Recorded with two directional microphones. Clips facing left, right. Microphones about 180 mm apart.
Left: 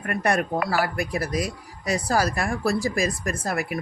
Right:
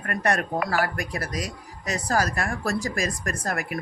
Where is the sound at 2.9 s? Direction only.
45° right (ahead or behind).